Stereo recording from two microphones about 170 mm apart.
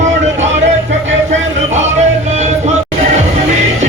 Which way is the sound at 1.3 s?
45° right (ahead or behind).